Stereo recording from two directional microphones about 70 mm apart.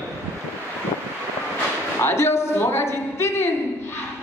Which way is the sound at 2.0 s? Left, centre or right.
Left.